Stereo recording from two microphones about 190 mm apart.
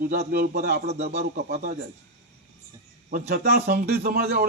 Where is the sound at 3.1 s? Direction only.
55° right (ahead or behind).